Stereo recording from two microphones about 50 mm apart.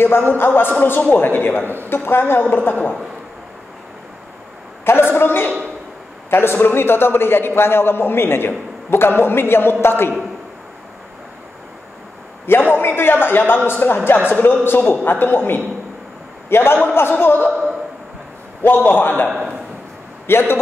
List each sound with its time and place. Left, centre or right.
0.0 s a man's voice: left
4.8 s a sound: left
6.3 s a man's voice: left
12.4 s a man's voice: left
17.5 s a sound: centre
18.6 s a man's voice: left
20.2 s a man's voice: left